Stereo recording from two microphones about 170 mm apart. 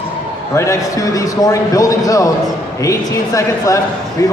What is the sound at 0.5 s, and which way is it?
A man's voice, 20° left (ahead or behind).